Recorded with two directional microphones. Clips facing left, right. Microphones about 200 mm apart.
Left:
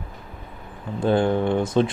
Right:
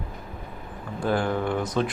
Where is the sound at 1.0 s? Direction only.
25° left (ahead or behind).